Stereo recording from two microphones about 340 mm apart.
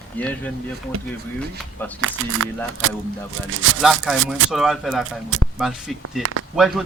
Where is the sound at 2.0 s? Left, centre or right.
Right.